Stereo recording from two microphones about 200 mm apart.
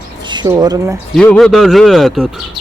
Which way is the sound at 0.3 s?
20° right (ahead or behind).